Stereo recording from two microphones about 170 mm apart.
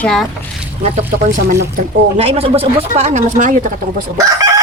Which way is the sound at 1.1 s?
70° right (ahead or behind).